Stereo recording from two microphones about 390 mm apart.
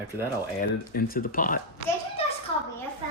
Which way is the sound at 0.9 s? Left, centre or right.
Left.